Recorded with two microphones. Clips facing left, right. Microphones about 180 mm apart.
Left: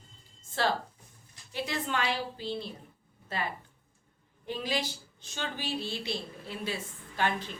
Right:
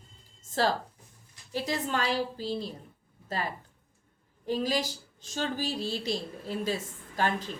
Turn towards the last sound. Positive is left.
turn(degrees=-40)  # may be behind; listen again after turning